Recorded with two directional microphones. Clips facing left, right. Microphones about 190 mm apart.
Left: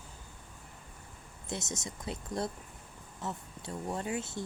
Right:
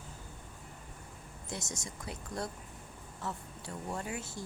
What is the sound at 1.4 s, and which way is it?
Speech, 20° left (ahead or behind).